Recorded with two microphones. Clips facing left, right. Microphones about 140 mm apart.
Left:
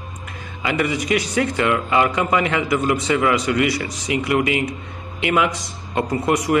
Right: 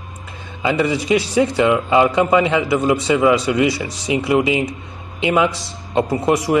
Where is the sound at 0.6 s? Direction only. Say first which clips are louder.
Right 4 dB; 25° right (ahead or behind).